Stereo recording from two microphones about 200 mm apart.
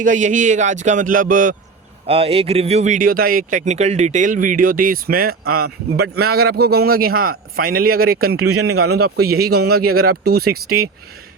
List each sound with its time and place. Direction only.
0.0 s speech: 40° right (ahead or behind)
2.0 s speech: 30° right (ahead or behind); by 8.3 s 50° right (ahead or behind)
8.3 s a man's voice: 90° right
9.4 s speech: 50° right (ahead or behind)
9.9 s a man's voice: 90° right